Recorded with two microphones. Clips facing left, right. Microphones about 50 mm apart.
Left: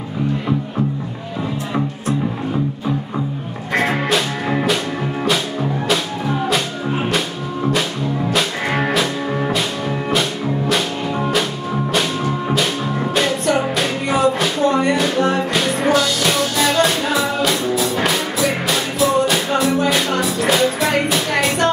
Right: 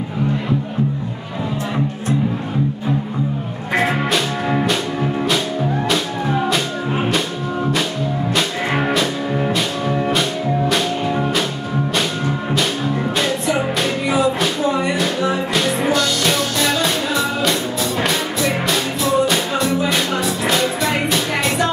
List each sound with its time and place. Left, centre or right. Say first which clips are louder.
3.8 s music: left 1 dB; centre
8.4 s music: right 1 dB; centre
14.0 s music: left 1 dB; left
15.5 s music: left 1 dB; centre